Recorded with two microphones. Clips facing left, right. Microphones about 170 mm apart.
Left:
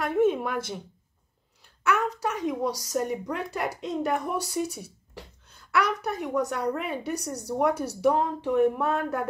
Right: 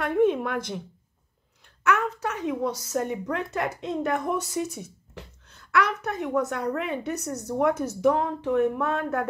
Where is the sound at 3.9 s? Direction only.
10° left (ahead or behind).